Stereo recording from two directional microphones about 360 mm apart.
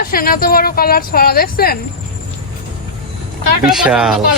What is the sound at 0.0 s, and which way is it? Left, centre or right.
Speech, left.